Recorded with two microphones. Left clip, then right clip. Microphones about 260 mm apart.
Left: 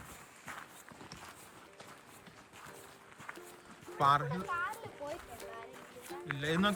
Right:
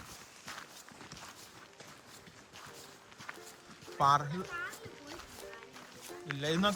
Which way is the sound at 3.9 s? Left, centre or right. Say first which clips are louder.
Right 1 dB; centre.